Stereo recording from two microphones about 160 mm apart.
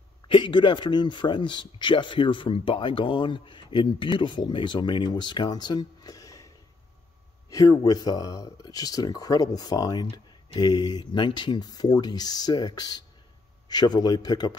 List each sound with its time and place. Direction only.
0.3 s speech: 30° left (ahead or behind)